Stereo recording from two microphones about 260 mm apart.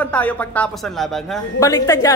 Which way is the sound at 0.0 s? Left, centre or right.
Centre.